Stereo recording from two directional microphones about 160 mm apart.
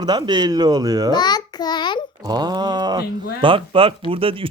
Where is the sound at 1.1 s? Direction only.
25° left (ahead or behind).